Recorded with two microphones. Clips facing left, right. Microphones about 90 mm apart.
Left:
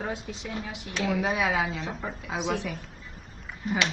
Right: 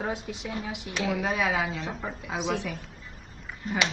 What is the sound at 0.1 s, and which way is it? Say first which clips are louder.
Speech: right 1 dB; 20° right (ahead or behind).